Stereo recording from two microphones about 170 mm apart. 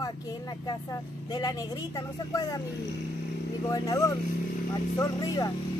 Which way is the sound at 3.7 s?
20° left (ahead or behind).